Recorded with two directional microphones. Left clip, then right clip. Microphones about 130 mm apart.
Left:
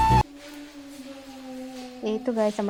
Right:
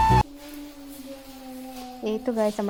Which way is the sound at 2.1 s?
Centre (ahead or behind).